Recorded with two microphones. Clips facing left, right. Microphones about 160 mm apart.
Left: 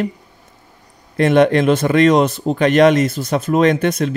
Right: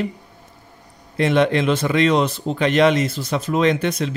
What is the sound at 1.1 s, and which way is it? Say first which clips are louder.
Speech: left 5 dB; 50° left (ahead or behind).